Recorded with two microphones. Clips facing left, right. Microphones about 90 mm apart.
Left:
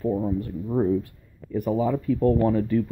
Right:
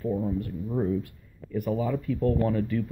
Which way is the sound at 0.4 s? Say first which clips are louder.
Left 4 dB; 30° left (ahead or behind).